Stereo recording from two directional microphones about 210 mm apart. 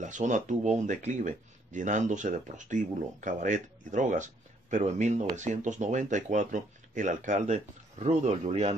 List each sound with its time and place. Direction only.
0.0 s speech: 35° right (ahead or behind)